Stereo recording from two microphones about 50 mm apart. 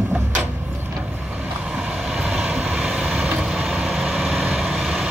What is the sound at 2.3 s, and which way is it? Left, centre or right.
Vehicle, centre.